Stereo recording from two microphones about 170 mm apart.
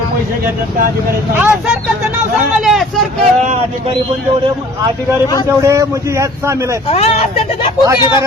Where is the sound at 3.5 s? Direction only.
35° right (ahead or behind).